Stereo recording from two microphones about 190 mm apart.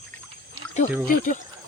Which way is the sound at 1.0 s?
40° left (ahead or behind).